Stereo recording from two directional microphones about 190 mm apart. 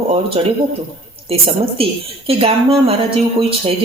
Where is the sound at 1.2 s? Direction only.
30° right (ahead or behind).